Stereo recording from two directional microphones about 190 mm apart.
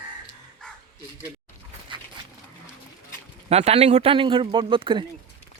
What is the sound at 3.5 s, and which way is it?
Speech, 35° right (ahead or behind).